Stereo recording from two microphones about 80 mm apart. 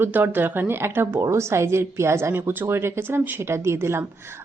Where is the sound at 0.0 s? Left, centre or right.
Right.